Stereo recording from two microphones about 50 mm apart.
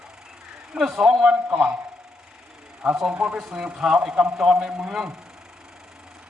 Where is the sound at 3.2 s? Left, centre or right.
Centre.